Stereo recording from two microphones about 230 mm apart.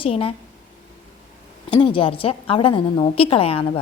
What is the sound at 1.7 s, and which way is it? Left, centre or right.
A woman's voice, left.